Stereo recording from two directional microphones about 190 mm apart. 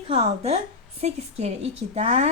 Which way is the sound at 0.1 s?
30° right (ahead or behind).